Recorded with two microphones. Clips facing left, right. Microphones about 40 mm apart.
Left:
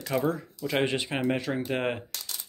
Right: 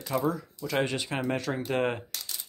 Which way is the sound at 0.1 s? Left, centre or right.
Left.